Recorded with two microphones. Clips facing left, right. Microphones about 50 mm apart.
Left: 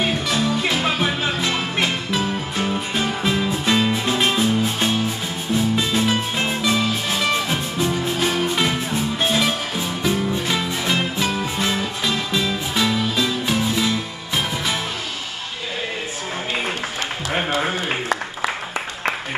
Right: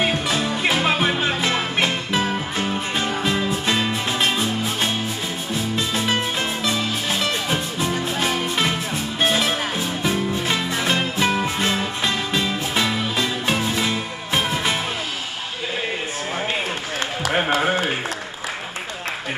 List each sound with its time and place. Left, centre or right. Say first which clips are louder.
0.0 s music: even; centre
2.5 s music: left 1 dB; centre
8.2 s music: left 2 dB; centre
11.1 s music: right 2 dB; right
11.7 s music: even; centre